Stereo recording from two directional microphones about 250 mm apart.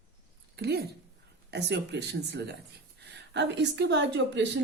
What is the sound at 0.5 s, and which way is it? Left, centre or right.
A woman's voice, right.